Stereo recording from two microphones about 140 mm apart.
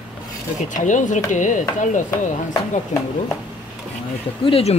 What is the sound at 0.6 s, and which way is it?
Speech, 65° left (ahead or behind).